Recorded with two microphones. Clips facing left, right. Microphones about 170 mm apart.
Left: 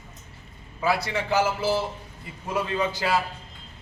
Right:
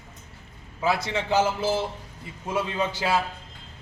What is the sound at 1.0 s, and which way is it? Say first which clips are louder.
Speech: right 1 dB; 20° right (ahead or behind).